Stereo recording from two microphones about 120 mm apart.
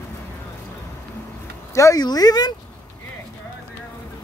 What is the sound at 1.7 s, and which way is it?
Speech, 25° left (ahead or behind).